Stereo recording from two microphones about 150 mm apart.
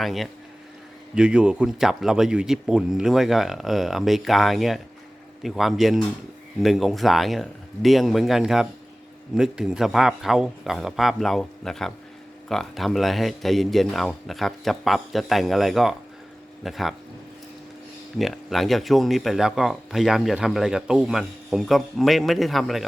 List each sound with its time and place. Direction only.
0.0 s speech: centre (ahead or behind)
18.2 s speech: centre (ahead or behind)